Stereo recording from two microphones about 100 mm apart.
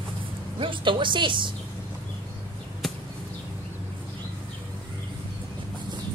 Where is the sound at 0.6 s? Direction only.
55° right (ahead or behind).